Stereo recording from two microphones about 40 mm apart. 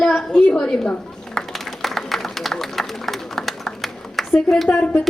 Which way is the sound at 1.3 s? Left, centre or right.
Centre.